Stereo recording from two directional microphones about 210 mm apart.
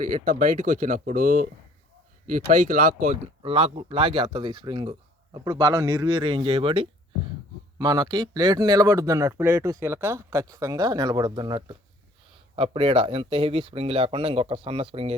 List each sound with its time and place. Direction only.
0.0 s speech: 40° right (ahead or behind)